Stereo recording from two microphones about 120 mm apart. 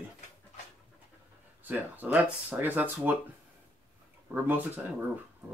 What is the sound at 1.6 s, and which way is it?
Speech, 15° right (ahead or behind).